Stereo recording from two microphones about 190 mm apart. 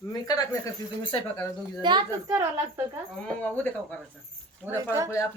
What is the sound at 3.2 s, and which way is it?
Speech, 5° left (ahead or behind).